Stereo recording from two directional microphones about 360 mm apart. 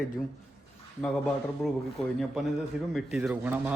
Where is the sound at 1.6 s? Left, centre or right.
Centre.